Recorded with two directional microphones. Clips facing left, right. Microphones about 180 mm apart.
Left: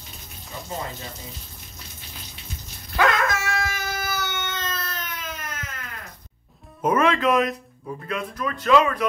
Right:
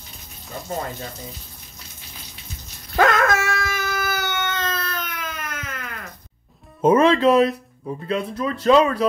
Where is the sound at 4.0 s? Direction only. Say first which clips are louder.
Right 4 dB; 55° right (ahead or behind).